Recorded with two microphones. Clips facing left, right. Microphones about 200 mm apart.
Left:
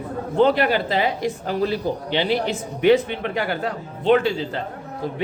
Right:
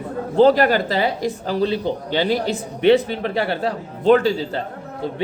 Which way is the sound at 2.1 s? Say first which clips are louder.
Right 2 dB; 40° right (ahead or behind).